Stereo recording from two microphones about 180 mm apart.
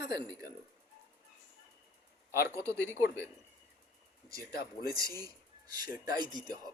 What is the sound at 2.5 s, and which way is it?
Speech, 15° right (ahead or behind).